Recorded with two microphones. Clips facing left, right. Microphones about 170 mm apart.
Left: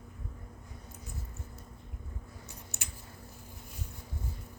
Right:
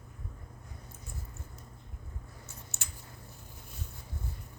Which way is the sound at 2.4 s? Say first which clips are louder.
Left 2 dB; 15° left (ahead or behind).